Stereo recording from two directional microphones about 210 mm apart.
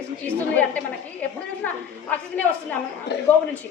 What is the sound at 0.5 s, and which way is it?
A woman's voice, 10° left (ahead or behind).